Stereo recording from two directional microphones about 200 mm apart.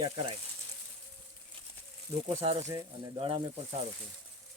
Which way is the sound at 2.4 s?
30° right (ahead or behind).